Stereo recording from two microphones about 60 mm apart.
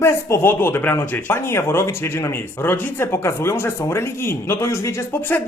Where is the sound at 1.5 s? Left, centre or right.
Left.